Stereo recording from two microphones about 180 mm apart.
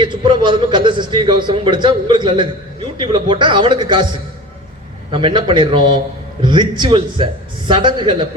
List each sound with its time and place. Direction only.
0.0 s a man's voice: 25° right (ahead or behind)
5.1 s a man's voice: 25° right (ahead or behind)